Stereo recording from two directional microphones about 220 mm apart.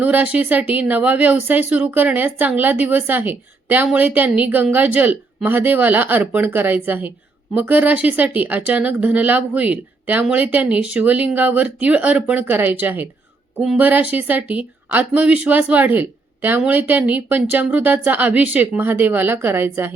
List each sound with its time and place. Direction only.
0.0 s speech: 5° right (ahead or behind)